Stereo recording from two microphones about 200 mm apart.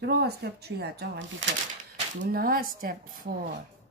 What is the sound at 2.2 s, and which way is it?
Speech, 45° right (ahead or behind).